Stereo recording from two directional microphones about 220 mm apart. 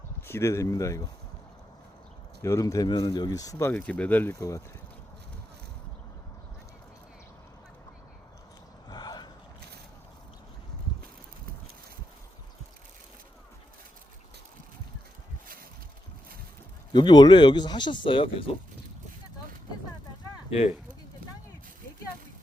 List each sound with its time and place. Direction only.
0.2 s speech: 10° left (ahead or behind)
2.4 s speech: 15° left (ahead or behind)
8.9 s a sound: 20° left (ahead or behind)
16.9 s speech: 20° left (ahead or behind)